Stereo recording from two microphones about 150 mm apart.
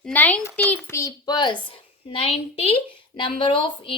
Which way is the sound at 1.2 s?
30° left (ahead or behind).